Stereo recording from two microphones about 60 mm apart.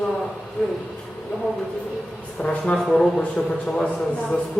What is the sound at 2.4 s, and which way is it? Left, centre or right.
A man's voice, centre.